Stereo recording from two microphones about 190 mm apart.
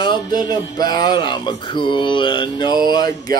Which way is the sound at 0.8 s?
20° left (ahead or behind).